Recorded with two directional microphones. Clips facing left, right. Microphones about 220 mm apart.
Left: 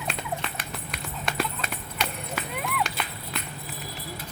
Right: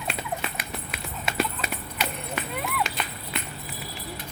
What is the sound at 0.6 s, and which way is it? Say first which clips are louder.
Clip-clop: right 1 dB; 5° right (ahead or behind).